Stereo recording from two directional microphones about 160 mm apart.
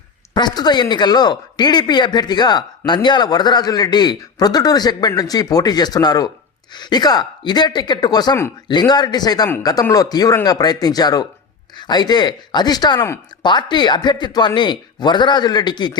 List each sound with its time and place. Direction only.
0.3 s speech: 25° left (ahead or behind)